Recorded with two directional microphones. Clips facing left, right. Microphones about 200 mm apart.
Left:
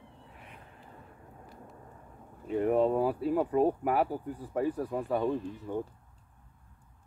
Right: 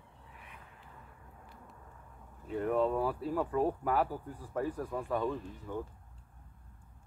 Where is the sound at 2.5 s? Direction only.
20° left (ahead or behind).